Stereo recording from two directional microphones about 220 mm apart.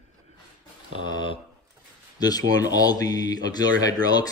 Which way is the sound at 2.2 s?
15° left (ahead or behind).